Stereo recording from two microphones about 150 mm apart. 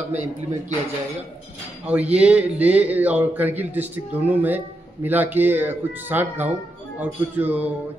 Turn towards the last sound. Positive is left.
turn(degrees=-10)  # may be behind; listen again after turning